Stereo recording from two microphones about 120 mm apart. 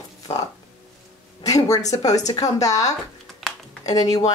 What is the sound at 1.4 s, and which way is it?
Speech, 30° left (ahead or behind).